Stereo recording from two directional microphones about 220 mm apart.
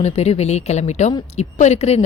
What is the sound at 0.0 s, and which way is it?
Speech, 30° left (ahead or behind).